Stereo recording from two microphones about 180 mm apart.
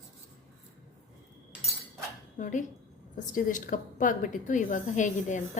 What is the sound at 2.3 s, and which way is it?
A woman's voice, 45° left (ahead or behind).